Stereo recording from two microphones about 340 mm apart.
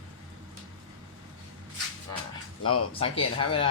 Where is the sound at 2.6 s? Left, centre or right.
Left.